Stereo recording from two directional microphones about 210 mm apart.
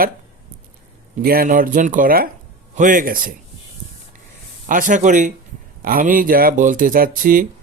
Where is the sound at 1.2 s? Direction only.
45° right (ahead or behind).